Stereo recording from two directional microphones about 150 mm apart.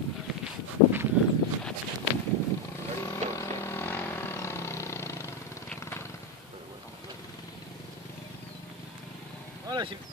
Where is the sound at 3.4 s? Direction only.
15° left (ahead or behind).